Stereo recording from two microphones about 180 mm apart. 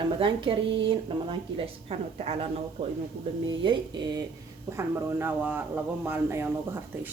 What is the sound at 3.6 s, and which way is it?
Speech, 25° right (ahead or behind).